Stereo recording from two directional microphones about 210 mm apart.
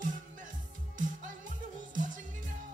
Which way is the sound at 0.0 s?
40° right (ahead or behind).